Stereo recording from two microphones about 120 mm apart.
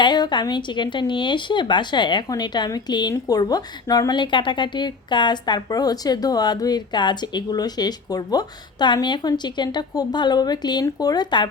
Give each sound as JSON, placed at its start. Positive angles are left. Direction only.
{"t": 0.0, "sound": "speech", "side_deg": 40}